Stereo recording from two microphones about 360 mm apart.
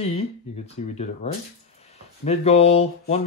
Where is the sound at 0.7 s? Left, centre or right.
Centre.